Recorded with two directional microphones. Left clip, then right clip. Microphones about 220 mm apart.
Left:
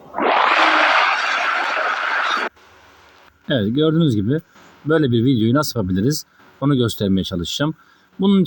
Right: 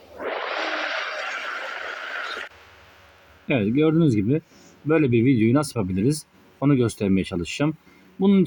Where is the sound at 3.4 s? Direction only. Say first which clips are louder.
Left 3 dB; 20° left (ahead or behind).